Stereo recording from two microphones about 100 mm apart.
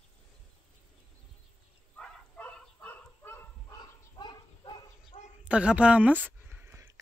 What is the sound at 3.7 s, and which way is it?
Dog, 45° left (ahead or behind).